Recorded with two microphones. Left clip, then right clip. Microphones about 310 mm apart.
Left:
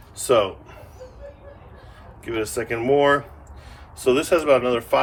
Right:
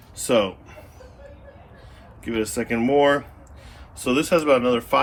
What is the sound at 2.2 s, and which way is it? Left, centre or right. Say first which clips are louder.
A man's voice: even; centre.